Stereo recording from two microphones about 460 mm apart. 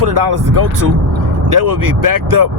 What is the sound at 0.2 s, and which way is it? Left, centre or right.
Speech, right.